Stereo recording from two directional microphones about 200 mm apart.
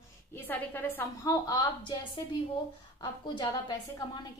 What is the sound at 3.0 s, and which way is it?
A woman's voice, 20° left (ahead or behind).